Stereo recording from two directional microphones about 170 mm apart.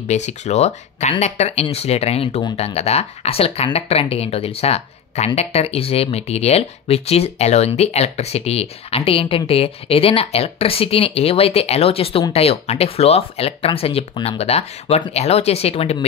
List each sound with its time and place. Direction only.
0.1 s speech: 40° left (ahead or behind)